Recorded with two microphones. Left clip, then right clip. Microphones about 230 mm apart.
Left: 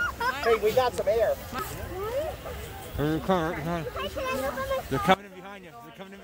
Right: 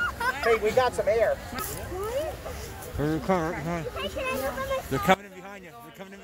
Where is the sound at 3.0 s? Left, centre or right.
Centre.